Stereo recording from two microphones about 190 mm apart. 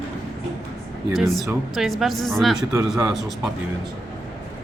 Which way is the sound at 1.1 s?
Centre (ahead or behind).